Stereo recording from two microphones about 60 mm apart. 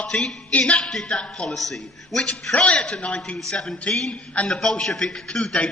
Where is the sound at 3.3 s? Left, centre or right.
Centre.